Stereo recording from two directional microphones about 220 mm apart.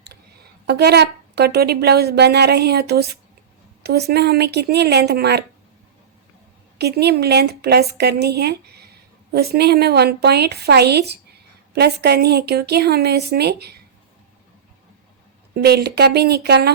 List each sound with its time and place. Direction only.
0.7 s a woman's voice: 50° right (ahead or behind)
6.7 s a woman's voice: 50° right (ahead or behind)
15.5 s a woman's voice: 45° right (ahead or behind)